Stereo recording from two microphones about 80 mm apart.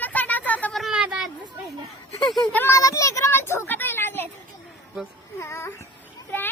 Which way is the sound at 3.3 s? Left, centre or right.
Left.